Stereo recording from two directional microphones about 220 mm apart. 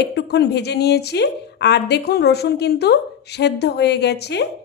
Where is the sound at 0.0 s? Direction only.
50° left (ahead or behind).